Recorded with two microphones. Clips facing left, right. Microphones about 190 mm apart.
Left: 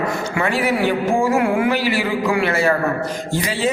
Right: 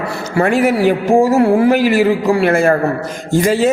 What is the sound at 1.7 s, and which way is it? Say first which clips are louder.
A man's voice: right 8 dB; 45° right (ahead or behind).